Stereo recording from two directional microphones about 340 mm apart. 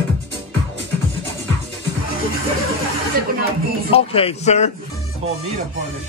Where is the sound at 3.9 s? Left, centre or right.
Centre.